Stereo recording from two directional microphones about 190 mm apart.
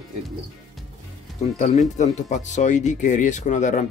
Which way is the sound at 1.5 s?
40° left (ahead or behind).